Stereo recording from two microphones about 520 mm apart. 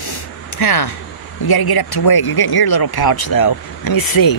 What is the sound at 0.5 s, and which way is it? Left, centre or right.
Speech, left.